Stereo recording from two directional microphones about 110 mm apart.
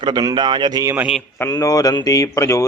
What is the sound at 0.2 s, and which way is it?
Speech, 40° right (ahead or behind).